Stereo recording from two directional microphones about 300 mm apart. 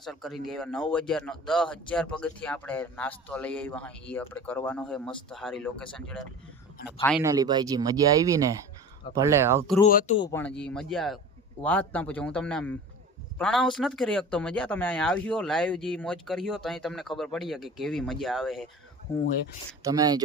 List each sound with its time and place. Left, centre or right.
0.0 s speech: centre
7.2 s speech: centre
9.8 s speech: left
10.2 s speech: centre
19.8 s speech: centre